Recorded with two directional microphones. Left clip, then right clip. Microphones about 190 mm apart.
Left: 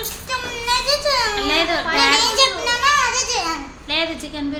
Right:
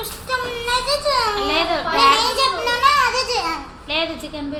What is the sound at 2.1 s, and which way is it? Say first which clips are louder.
Children playing: left 2 dB; 20° left (ahead or behind).